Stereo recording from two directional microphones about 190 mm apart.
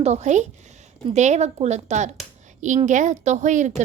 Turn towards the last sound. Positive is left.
turn(degrees=-40)  # may be behind; listen again after turning